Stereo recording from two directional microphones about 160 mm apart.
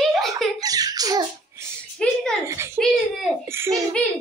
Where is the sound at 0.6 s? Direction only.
25° right (ahead or behind).